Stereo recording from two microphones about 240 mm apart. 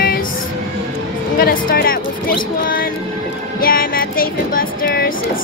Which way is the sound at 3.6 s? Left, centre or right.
Left.